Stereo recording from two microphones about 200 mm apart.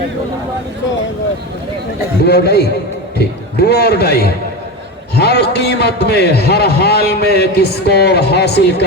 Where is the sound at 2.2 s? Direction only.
50° left (ahead or behind).